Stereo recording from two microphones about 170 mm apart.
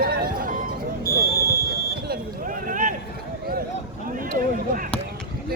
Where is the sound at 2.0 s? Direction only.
55° right (ahead or behind).